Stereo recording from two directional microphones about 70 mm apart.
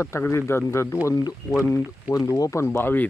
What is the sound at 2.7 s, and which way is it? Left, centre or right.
Speech, left.